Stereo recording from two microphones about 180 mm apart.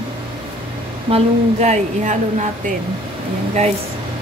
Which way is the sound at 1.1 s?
40° right (ahead or behind).